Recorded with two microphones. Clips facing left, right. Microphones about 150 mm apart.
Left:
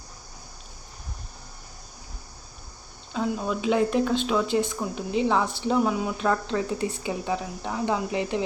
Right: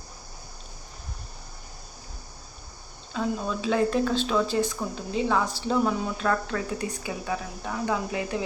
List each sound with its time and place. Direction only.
3.3 s speech: 10° left (ahead or behind)
6.1 s speech: 20° left (ahead or behind)